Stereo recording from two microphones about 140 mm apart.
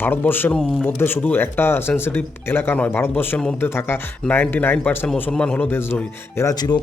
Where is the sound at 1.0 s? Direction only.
15° left (ahead or behind).